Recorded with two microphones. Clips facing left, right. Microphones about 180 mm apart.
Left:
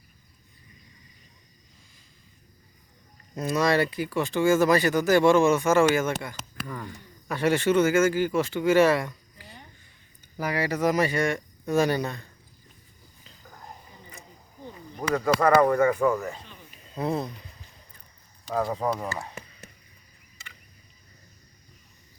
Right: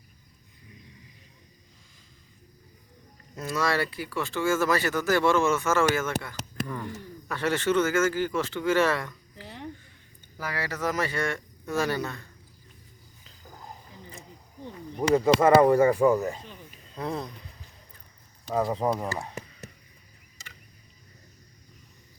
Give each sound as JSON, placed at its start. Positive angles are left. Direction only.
{"t": 3.3, "sound": "speech", "side_deg": 20}
{"t": 6.7, "sound": "speech", "side_deg": -5}
{"t": 7.3, "sound": "speech", "side_deg": 10}
{"t": 9.4, "sound": "a sound", "side_deg": -90}
{"t": 10.3, "sound": "speech", "side_deg": 15}
{"t": 15.1, "sound": "speech", "side_deg": -25}
{"t": 16.0, "sound": "speech", "side_deg": -20}
{"t": 16.9, "sound": "speech", "side_deg": 10}
{"t": 18.8, "sound": "speech", "side_deg": -10}
{"t": 19.2, "sound": "a sound", "side_deg": 0}